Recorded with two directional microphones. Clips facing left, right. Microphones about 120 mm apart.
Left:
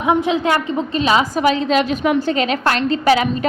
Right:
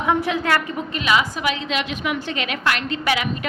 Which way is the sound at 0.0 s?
20° left (ahead or behind).